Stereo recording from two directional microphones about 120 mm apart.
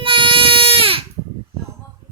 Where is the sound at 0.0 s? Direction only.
45° right (ahead or behind).